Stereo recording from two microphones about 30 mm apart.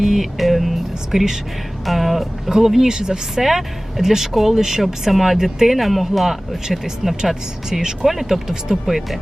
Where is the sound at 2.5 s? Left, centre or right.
Centre.